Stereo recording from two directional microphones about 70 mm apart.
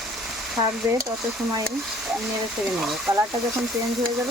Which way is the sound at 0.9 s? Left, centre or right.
Right.